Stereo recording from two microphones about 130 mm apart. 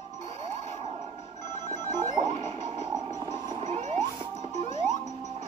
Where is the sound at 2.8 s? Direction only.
30° right (ahead or behind).